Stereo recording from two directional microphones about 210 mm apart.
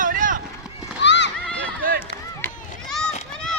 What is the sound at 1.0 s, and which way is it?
Horse, 55° left (ahead or behind).